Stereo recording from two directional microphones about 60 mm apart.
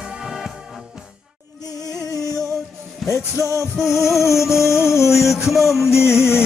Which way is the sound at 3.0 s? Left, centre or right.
Left.